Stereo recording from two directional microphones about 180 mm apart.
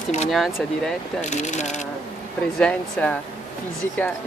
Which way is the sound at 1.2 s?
40° left (ahead or behind).